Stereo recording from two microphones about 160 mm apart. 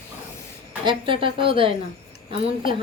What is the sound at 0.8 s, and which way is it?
A woman's voice, 35° right (ahead or behind).